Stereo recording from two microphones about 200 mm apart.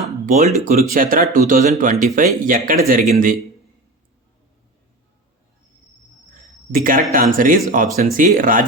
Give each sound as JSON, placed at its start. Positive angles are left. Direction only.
{"t": 0.3, "sound": "speech", "side_deg": -35}
{"t": 6.7, "sound": "speech", "side_deg": -45}